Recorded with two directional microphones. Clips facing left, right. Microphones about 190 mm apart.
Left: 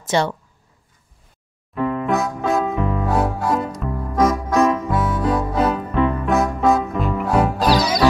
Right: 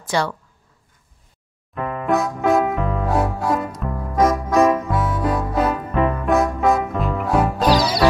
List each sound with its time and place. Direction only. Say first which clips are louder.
0.0 s speech: left 2 dB; 25° left (ahead or behind)
2.0 s keyboard: right 7 dB; centre (ahead or behind)
2.7 s music: even; centre (ahead or behind)